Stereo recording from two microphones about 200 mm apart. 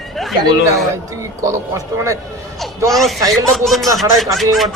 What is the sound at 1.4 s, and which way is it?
Speech, 15° right (ahead or behind).